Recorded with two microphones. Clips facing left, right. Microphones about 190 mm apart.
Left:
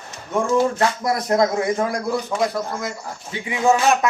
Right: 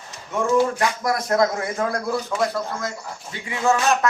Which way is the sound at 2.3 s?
Centre (ahead or behind).